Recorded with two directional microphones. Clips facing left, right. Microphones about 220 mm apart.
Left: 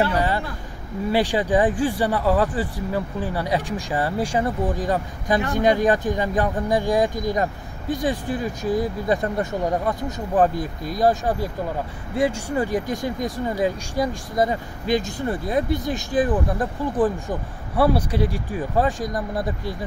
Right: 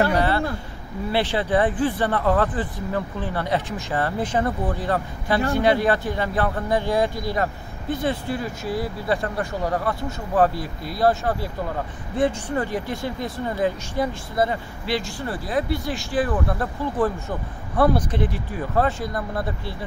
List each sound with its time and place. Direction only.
1.1 s speech: 15° left (ahead or behind)